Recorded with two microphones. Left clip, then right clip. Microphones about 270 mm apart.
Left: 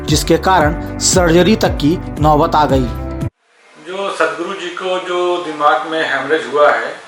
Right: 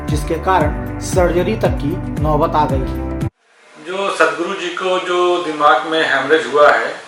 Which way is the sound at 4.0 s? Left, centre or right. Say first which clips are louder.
Right 2 dB; centre.